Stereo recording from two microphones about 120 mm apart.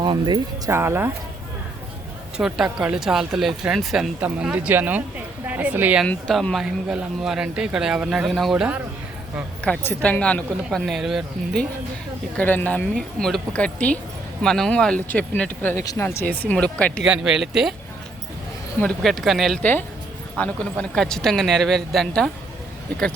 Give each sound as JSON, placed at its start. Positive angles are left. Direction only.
{"t": 0.0, "sound": "speech", "side_deg": -40}
{"t": 0.7, "sound": "speech", "side_deg": -20}
{"t": 2.4, "sound": "a woman's voice", "side_deg": -5}
{"t": 6.1, "sound": "speech", "side_deg": 5}
{"t": 9.8, "sound": "speech", "side_deg": 10}
{"t": 12.4, "sound": "speech", "side_deg": 15}
{"t": 12.9, "sound": "speech", "side_deg": 5}
{"t": 15.8, "sound": "speech", "side_deg": 30}
{"t": 16.0, "sound": "speech", "side_deg": 15}
{"t": 17.0, "sound": "speech", "side_deg": -5}
{"t": 18.8, "sound": "speech", "side_deg": 5}